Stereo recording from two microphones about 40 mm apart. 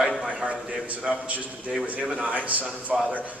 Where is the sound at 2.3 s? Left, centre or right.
Right.